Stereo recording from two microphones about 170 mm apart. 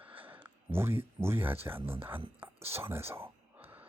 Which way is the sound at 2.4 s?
15° right (ahead or behind).